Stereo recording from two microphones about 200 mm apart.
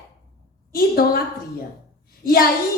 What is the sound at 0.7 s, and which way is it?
Speech, 50° left (ahead or behind).